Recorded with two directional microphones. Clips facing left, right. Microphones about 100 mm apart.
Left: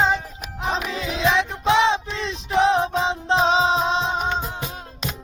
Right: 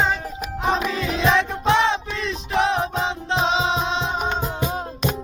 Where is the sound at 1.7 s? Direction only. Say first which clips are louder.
Left 1 dB; 20° left (ahead or behind).